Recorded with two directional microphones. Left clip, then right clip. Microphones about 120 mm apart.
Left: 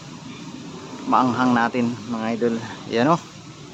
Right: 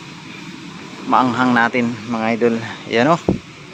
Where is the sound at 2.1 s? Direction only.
40° right (ahead or behind).